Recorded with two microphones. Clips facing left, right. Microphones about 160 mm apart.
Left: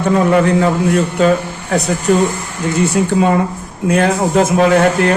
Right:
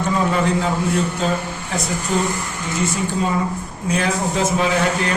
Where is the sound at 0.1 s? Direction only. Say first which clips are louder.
Left 8 dB; 65° left (ahead or behind).